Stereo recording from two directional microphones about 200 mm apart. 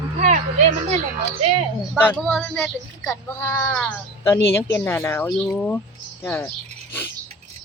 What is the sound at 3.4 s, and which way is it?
Speech, 15° left (ahead or behind).